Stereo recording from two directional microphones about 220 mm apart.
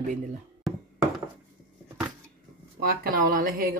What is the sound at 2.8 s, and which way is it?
Speech, 40° right (ahead or behind).